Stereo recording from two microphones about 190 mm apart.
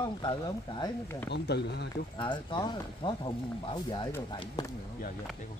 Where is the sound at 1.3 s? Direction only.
60° left (ahead or behind).